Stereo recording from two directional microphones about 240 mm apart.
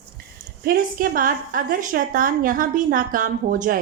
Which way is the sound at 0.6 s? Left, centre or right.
Right.